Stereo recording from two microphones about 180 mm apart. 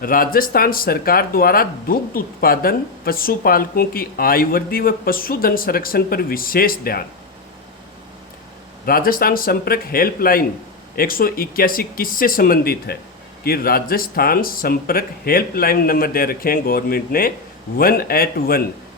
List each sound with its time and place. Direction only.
0.0 s speech: 50° left (ahead or behind)
8.9 s speech: 55° left (ahead or behind)